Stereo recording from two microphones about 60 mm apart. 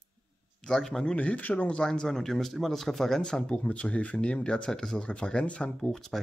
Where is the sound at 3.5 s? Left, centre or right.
Left.